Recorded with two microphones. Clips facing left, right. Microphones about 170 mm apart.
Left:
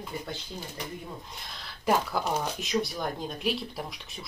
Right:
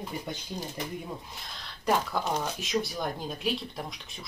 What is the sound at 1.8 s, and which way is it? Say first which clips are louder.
Speech: left 1 dB; centre (ahead or behind).